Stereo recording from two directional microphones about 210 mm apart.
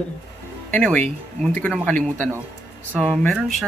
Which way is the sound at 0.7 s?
5° left (ahead or behind).